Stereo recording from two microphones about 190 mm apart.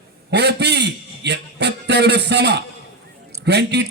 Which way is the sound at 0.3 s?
60° right (ahead or behind).